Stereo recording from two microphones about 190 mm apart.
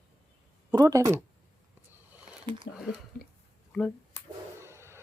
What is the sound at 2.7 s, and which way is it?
Speech, 70° left (ahead or behind).